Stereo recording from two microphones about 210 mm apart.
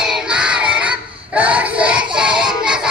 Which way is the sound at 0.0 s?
5° right (ahead or behind).